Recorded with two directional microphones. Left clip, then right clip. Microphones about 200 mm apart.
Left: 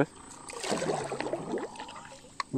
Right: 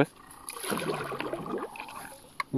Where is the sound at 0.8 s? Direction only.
15° right (ahead or behind).